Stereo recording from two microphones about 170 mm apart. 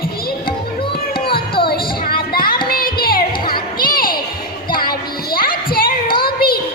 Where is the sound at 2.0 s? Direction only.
60° left (ahead or behind).